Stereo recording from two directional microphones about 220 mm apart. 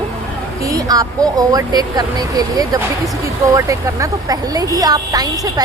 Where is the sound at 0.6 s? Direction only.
15° right (ahead or behind).